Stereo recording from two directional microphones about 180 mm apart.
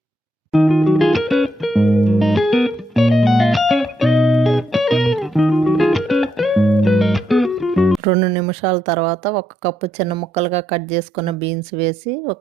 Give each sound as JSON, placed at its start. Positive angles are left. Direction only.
{"t": 0.5, "sound": "music", "side_deg": 0}
{"t": 8.0, "sound": "speech", "side_deg": -25}